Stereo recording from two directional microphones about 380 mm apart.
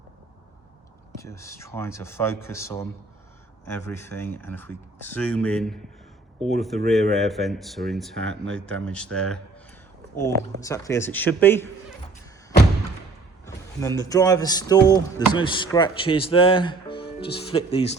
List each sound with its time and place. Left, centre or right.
1.2 s speech: centre
10.6 s speech: centre
13.4 s speech: centre
17.1 s music: left
17.3 s speech: centre